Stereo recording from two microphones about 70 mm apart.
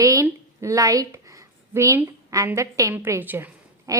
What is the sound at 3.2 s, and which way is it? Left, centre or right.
Speech, right.